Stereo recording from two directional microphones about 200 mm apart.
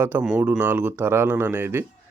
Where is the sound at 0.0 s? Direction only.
10° right (ahead or behind).